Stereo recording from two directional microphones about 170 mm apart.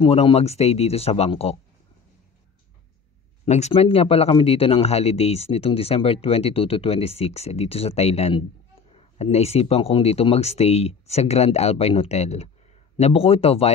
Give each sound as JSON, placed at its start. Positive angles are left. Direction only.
{"t": 0.0, "sound": "speech", "side_deg": 35}
{"t": 3.4, "sound": "speech", "side_deg": 40}